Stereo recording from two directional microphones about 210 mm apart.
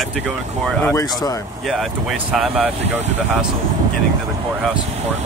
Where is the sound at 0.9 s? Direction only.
15° left (ahead or behind).